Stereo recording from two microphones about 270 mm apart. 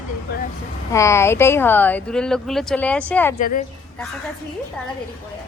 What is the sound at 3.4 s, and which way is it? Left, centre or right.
Speech, left.